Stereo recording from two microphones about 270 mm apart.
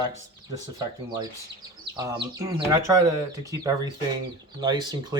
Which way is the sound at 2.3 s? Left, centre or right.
Centre.